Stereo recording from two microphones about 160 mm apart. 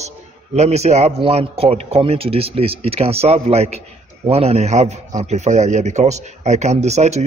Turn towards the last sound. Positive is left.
turn(degrees=-45)  # may be behind; listen again after turning